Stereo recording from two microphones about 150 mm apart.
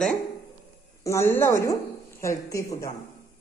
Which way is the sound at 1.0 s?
15° left (ahead or behind).